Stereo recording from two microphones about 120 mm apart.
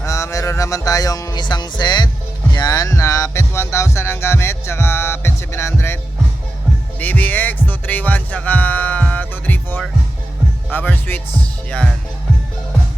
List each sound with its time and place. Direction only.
0.0 s music: 25° left (ahead or behind)
2.5 s speech: 35° left (ahead or behind)
7.0 s speech: 15° left (ahead or behind)